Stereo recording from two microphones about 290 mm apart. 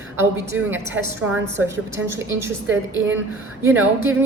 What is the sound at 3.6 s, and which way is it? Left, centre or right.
Speech, centre.